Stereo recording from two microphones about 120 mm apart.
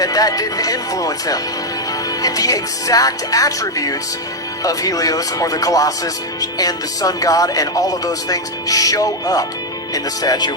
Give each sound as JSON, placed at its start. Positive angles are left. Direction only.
{"t": 0.0, "sound": "speech", "side_deg": 30}